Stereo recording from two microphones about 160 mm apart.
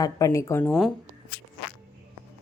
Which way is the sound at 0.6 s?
5° left (ahead or behind).